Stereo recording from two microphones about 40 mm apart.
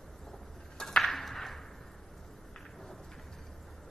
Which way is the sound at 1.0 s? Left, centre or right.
Centre.